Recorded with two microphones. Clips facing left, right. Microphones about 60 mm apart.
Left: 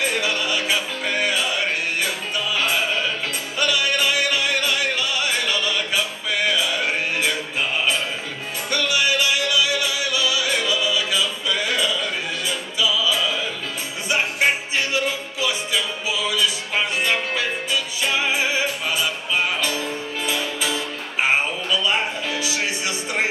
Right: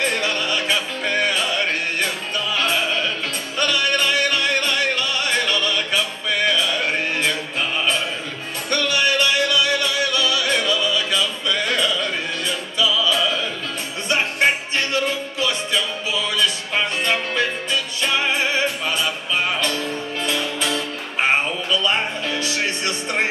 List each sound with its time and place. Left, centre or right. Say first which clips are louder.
0.0 s music: right 1 dB; centre
8.6 s music: right 2 dB; centre